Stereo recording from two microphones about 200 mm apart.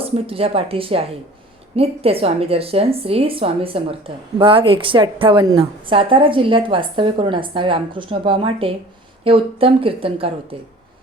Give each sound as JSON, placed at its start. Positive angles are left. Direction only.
{"t": 0.0, "sound": "a woman's voice", "side_deg": -30}